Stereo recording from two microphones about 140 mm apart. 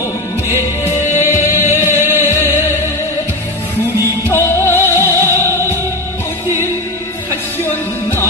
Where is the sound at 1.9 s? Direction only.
15° right (ahead or behind).